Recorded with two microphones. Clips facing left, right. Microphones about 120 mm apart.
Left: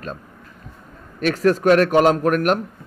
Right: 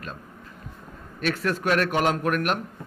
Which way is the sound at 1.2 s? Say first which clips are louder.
Left 9 dB; 40° left (ahead or behind).